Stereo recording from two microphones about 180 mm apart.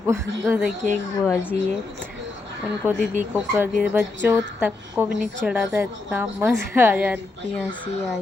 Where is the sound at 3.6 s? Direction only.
5° right (ahead or behind).